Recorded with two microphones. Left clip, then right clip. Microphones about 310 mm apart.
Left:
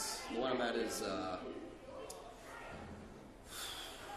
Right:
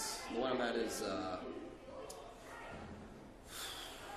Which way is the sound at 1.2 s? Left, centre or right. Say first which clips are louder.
Even; centre.